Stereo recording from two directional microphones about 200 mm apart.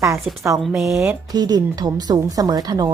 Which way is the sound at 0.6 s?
Centre (ahead or behind).